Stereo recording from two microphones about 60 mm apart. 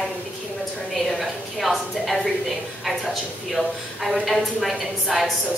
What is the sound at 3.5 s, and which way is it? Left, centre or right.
A woman's voice, centre.